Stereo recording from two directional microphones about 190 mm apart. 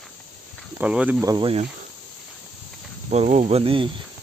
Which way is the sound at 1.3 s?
25° right (ahead or behind).